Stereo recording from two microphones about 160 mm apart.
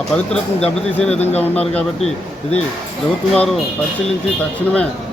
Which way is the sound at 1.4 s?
10° left (ahead or behind).